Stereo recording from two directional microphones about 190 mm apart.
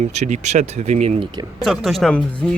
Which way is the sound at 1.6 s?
Centre (ahead or behind).